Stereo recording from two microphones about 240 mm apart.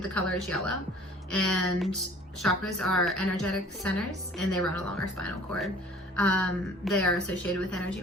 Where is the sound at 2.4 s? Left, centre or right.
Centre.